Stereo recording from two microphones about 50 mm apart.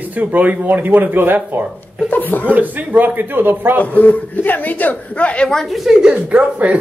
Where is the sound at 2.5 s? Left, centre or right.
Right.